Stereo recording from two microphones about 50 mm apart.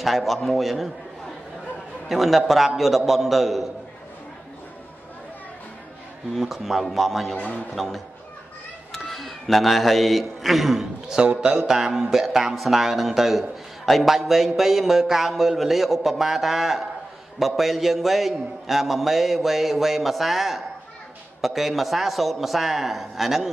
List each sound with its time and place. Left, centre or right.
0.0 s speech: centre
2.0 s speech: centre
6.3 s speech: centre
7.3 s a man's voice: left
7.7 s a man's voice: centre